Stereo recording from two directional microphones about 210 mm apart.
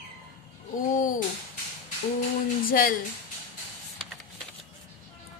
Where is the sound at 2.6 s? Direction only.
40° left (ahead or behind).